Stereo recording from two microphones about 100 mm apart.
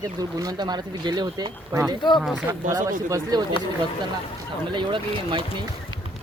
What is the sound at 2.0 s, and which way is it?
Speech, 50° left (ahead or behind).